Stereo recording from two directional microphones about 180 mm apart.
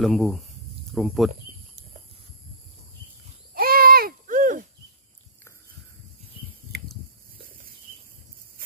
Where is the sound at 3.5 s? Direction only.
55° right (ahead or behind).